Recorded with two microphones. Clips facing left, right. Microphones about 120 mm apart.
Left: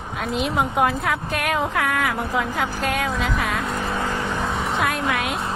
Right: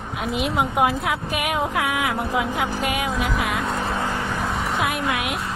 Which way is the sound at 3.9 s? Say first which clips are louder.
Even; 15° right (ahead or behind).